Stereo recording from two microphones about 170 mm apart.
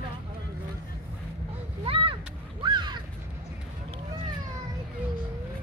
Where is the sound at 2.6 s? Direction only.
25° right (ahead or behind).